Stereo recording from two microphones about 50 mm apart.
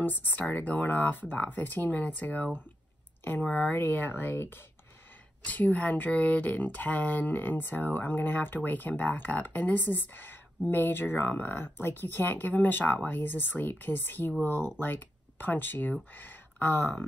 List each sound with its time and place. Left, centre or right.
0.0 s speech: left
3.7 s speech: left
5.4 s speech: left